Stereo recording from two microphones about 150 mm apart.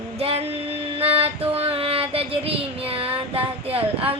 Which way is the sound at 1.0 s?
40° right (ahead or behind).